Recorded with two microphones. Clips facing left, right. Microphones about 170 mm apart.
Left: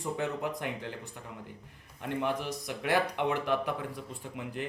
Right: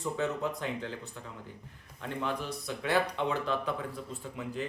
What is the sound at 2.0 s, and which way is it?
Speech, 15° left (ahead or behind).